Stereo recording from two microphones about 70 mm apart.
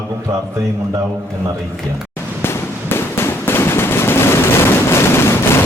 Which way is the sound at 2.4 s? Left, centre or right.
Left.